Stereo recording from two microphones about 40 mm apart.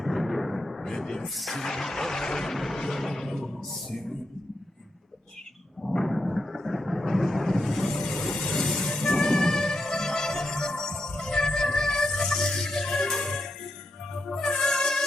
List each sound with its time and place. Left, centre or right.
0.0 s a sound: centre
0.9 s artillery fire: centre
1.2 s speech: centre
1.6 s a sound: centre
5.8 s thunder: centre
8.0 s a sound: centre
8.5 s vehicle: centre
8.9 s music: centre
14.6 s music: centre